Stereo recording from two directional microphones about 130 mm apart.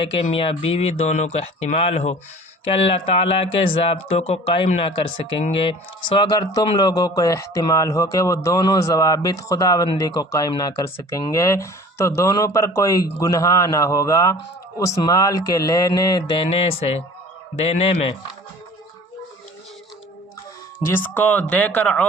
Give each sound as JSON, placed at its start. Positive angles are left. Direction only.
{"t": 0.0, "sound": "speech", "side_deg": 45}
{"t": 16.4, "sound": "speech", "side_deg": 50}
{"t": 20.7, "sound": "speech", "side_deg": 15}